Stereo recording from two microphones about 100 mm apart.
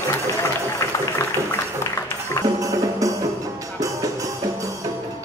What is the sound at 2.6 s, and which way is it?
Music, 35° right (ahead or behind).